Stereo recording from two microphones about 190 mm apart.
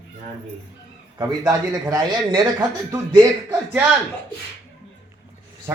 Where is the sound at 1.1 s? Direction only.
20° right (ahead or behind).